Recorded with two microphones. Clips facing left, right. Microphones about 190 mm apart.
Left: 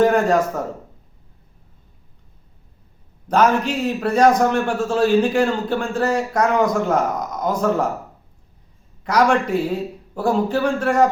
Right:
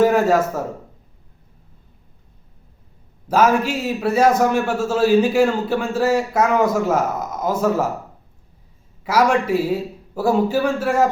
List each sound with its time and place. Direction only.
0.0 s speech: 5° right (ahead or behind)
3.2 s a man's voice: 5° right (ahead or behind)
9.0 s a man's voice: 5° right (ahead or behind)